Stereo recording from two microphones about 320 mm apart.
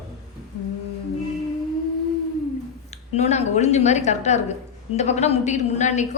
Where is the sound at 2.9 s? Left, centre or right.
Left.